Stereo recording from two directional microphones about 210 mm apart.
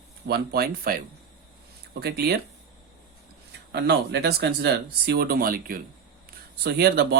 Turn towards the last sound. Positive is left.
turn(degrees=-50)  # may be behind; listen again after turning